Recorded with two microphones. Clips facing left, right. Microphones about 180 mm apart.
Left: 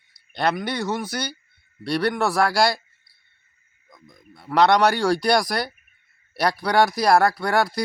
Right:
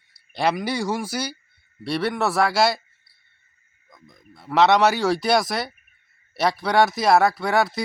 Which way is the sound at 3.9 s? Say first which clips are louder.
Left 1 dB; centre (ahead or behind).